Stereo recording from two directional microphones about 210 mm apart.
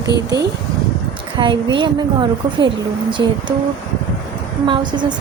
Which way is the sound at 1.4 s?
20° right (ahead or behind).